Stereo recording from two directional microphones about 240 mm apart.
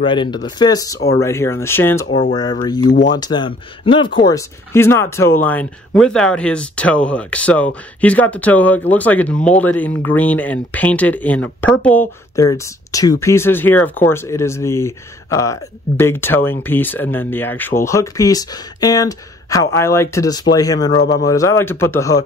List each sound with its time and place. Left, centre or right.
0.0 s speech: centre
2.9 s speech: left
3.2 s speech: centre
21.0 s speech: left
21.3 s speech: centre